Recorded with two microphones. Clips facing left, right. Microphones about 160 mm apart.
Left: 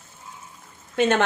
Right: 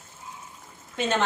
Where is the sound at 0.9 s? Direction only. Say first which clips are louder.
Left 5 dB; 60° left (ahead or behind).